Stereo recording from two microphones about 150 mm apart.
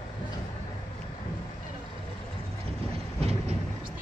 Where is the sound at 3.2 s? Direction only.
45° right (ahead or behind).